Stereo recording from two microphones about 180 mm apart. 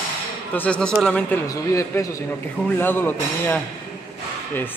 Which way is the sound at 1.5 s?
15° left (ahead or behind).